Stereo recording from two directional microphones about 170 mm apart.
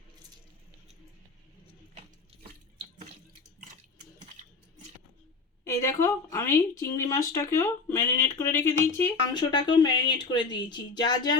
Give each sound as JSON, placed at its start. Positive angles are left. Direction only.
{"t": 5.6, "sound": "speech", "side_deg": 15}